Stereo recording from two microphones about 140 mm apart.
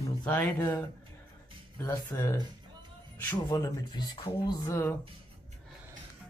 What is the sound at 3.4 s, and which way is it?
A man's voice, 25° left (ahead or behind).